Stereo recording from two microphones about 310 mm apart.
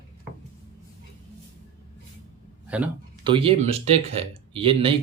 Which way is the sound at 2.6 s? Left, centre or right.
Centre.